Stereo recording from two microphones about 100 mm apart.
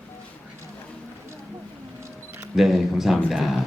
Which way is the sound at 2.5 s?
5° right (ahead or behind).